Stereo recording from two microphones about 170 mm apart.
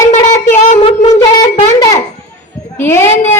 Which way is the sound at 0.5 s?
45° left (ahead or behind).